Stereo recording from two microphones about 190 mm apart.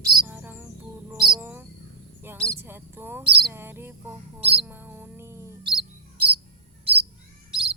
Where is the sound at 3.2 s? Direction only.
25° right (ahead or behind).